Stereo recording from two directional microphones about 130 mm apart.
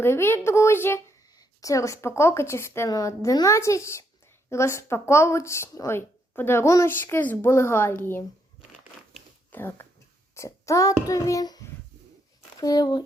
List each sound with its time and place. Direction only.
0.0 s speech: 20° left (ahead or behind)
9.5 s a child's voice: 15° left (ahead or behind)